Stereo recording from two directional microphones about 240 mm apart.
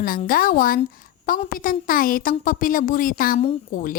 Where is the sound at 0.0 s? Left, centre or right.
Left.